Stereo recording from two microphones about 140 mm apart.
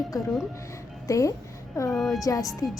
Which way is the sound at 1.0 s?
25° left (ahead or behind).